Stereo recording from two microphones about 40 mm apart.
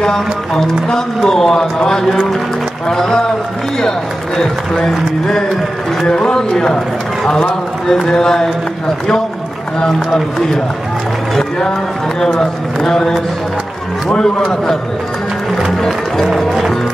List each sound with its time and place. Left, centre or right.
0.8 s a man's voice: centre
4.4 s a man's voice: centre
7.8 s a man's voice: centre
12.2 s a man's voice: centre
16.3 s speech: centre